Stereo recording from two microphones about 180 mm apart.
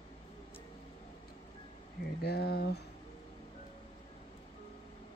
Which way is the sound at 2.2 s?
65° left (ahead or behind).